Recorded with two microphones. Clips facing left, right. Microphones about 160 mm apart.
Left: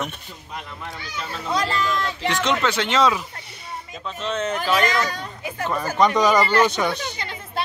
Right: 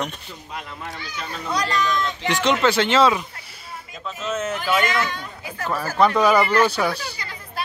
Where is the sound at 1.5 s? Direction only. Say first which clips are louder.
Left 1 dB; 25° left (ahead or behind).